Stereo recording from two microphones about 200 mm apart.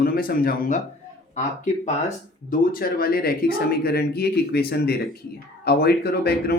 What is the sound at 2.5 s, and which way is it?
Speech, 45° left (ahead or behind).